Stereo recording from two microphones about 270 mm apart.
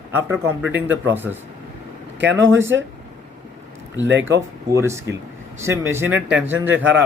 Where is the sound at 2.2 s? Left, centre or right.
Right.